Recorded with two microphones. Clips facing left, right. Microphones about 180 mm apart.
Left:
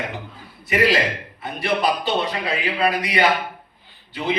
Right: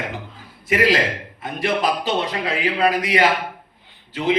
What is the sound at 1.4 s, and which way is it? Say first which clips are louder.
Speech: even; 90° right.